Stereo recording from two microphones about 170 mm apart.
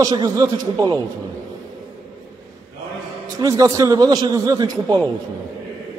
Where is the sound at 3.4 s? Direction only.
20° right (ahead or behind).